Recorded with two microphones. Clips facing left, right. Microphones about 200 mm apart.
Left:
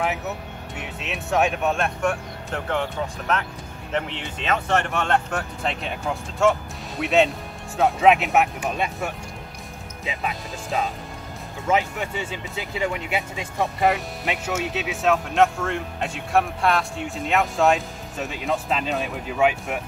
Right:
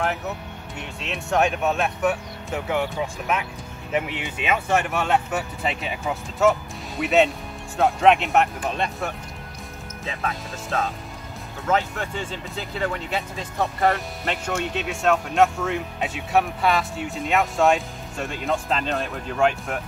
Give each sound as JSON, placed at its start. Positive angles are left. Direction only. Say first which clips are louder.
{"t": 0.7, "sound": "speech", "louder": "even", "side_deg": 0}